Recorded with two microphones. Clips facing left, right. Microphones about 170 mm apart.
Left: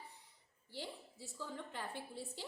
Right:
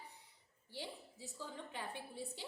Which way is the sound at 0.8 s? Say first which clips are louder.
Left 1 dB; 15° right (ahead or behind).